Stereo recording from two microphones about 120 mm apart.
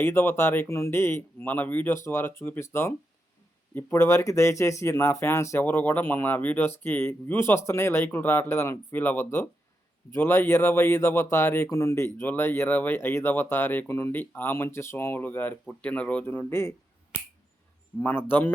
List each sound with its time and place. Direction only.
0.0 s speech: 20° left (ahead or behind)
18.0 s speech: 15° left (ahead or behind)